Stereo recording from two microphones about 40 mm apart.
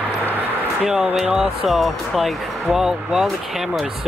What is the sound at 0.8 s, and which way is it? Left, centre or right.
Speech, centre.